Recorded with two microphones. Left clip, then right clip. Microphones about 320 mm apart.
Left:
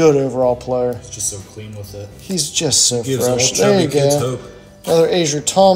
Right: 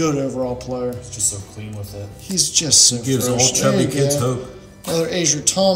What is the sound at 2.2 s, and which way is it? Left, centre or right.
A man's voice, centre.